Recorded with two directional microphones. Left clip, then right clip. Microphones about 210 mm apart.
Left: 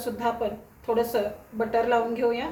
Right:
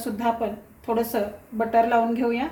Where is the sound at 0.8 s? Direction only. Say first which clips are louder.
Even; 40° right (ahead or behind).